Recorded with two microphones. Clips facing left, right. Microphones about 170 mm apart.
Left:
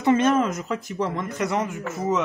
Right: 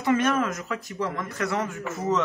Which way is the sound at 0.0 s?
20° left (ahead or behind).